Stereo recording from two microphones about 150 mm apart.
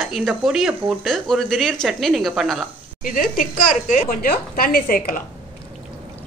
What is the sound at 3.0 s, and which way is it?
A woman's voice, 65° left (ahead or behind).